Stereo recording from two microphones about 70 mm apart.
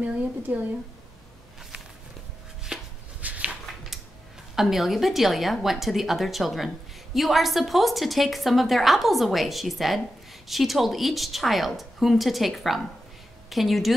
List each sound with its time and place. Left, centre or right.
0.0 s a woman's voice: right
2.7 s chopping: centre
3.2 s a sound: centre
4.6 s a woman's voice: centre